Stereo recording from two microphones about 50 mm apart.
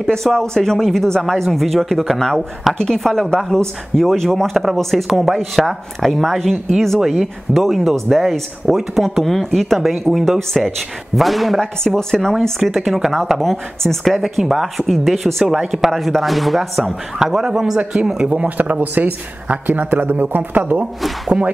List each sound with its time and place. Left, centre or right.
0.0 s speech: centre
3.0 s speech: centre
17.2 s speech: centre
18.2 s speech: right